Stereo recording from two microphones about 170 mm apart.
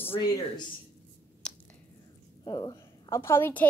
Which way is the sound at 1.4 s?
5° left (ahead or behind).